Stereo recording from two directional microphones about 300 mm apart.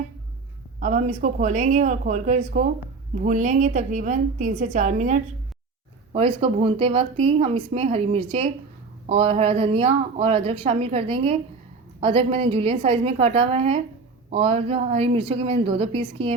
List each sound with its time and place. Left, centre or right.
0.8 s speech: right